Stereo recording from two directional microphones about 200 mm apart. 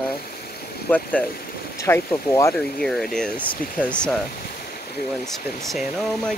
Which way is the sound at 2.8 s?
Centre (ahead or behind).